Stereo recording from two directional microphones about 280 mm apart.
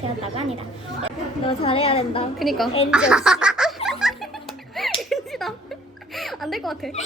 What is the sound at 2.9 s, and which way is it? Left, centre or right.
Snicker, centre.